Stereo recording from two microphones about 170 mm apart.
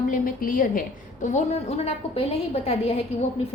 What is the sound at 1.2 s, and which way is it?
A woman's voice, 40° left (ahead or behind).